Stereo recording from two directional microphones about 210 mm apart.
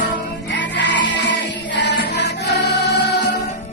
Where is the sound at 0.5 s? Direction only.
55° left (ahead or behind).